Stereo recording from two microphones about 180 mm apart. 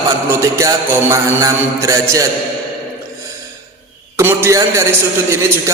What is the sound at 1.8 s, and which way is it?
Mantra, 15° right (ahead or behind).